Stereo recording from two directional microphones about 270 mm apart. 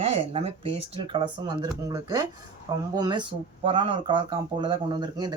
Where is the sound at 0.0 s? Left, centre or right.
Right.